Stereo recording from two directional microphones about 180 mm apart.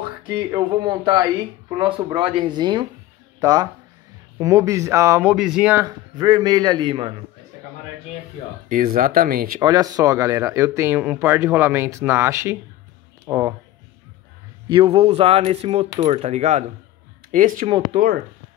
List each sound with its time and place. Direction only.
0.3 s speech: 25° right (ahead or behind)
5.3 s speech: 5° right (ahead or behind); by 7.2 s 30° right (ahead or behind)
8.6 s speech: 50° right (ahead or behind)
9.6 s speech: 20° right (ahead or behind)
14.7 s speech: 30° right (ahead or behind); by 17.6 s 45° right (ahead or behind)